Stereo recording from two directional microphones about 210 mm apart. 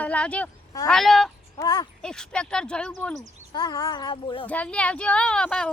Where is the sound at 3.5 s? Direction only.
20° left (ahead or behind).